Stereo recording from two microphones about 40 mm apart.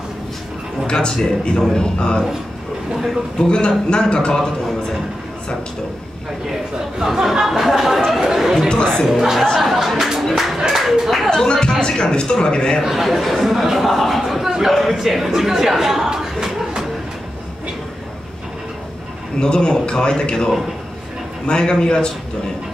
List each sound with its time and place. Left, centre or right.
0.8 s a man's voice: centre
3.3 s a man's voice: left
7.0 s speech: centre
10.8 s clapping: centre
11.2 s music: centre
11.8 s a man's voice: left
12.8 s speech: centre
14.2 s a sound: centre
14.8 s speech: centre
19.4 s a man's voice: centre